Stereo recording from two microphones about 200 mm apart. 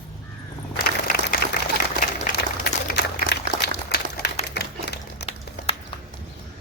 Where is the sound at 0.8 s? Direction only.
45° left (ahead or behind).